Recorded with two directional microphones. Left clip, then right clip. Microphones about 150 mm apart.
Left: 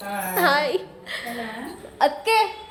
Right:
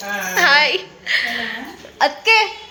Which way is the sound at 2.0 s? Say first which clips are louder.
Right 5 dB; 10° right (ahead or behind).